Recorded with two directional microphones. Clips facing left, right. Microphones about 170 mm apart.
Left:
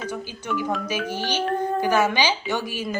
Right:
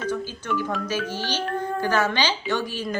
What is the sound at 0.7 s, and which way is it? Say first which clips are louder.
Speech: left 1 dB; 10° left (ahead or behind).